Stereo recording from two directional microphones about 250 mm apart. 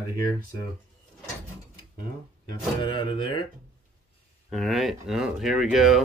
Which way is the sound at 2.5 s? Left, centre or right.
Centre.